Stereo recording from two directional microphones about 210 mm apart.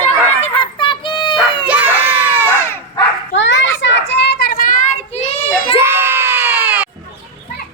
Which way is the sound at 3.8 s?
55° left (ahead or behind).